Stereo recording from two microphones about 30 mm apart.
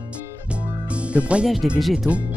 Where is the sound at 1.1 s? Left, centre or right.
Right.